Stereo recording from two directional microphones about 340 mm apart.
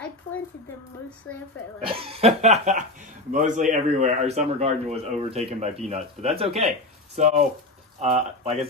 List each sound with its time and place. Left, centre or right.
1.8 s chuckle: centre
3.3 s a man's voice: right